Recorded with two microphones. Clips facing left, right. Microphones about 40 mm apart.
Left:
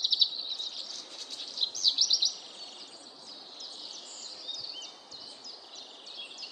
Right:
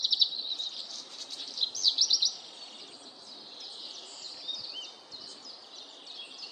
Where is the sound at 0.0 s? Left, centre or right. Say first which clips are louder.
Even; centre.